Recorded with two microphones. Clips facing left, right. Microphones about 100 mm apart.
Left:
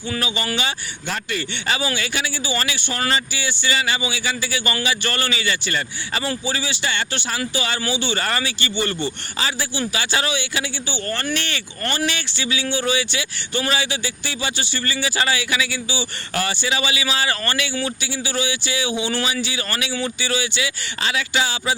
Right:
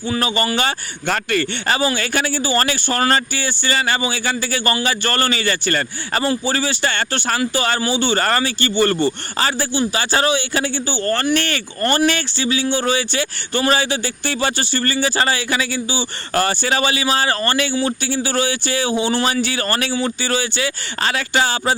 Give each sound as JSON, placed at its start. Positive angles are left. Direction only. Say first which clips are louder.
{"t": 0.2, "sound": "speech", "louder": "right 6 dB", "side_deg": -45}
{"t": 19.2, "sound": "speech", "louder": "right 5 dB", "side_deg": -50}